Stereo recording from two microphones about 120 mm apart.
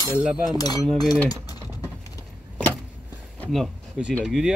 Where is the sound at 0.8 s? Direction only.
Centre (ahead or behind).